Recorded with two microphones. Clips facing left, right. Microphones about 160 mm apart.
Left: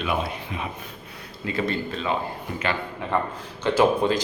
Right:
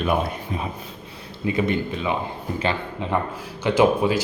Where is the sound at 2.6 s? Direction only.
30° right (ahead or behind).